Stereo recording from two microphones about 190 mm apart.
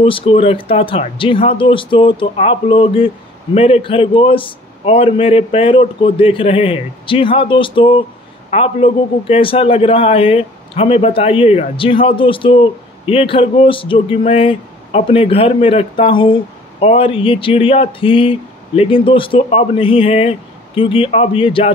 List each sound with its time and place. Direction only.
0.0 s a man's voice: 30° left (ahead or behind)